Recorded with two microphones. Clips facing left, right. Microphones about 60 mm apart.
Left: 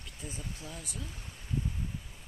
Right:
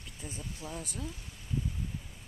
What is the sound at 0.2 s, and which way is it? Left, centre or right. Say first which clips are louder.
Speech: even; right.